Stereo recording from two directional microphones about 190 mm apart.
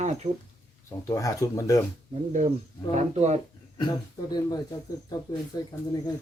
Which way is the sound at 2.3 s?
40° right (ahead or behind).